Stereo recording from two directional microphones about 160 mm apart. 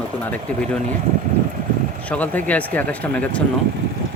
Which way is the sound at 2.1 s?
10° left (ahead or behind).